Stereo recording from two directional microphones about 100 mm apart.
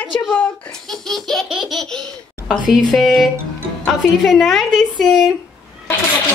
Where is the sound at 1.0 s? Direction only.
5° left (ahead or behind).